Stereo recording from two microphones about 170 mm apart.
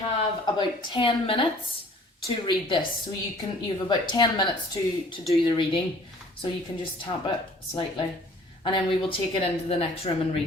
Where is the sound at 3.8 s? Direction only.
25° left (ahead or behind).